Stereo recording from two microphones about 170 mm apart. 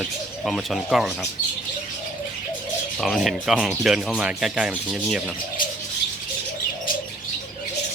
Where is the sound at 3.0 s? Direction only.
Centre (ahead or behind).